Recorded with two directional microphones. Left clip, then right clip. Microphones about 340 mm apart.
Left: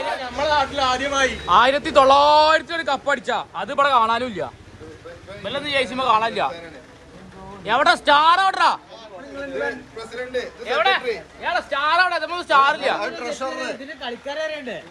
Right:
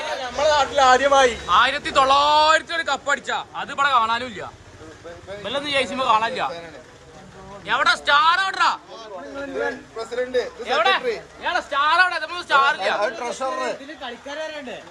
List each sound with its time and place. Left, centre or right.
0.0 s a sound: centre
1.5 s a man's voice: centre
7.6 s speech: centre
10.7 s a man's voice: centre
13.0 s a man's voice: right
14.0 s speech: centre